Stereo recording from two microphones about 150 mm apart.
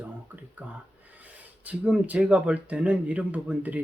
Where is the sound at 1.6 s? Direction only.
10° right (ahead or behind).